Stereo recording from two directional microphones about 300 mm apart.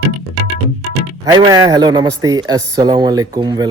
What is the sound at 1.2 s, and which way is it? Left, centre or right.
A man's voice, centre.